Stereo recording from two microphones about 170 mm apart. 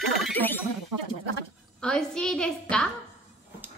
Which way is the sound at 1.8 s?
5° left (ahead or behind).